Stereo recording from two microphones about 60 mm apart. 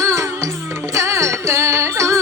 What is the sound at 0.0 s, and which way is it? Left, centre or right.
Music, right.